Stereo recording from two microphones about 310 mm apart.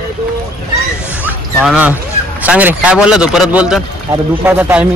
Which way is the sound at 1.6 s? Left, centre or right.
Centre.